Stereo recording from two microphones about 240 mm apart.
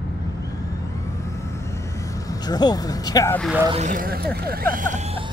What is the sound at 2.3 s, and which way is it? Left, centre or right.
Speech, centre.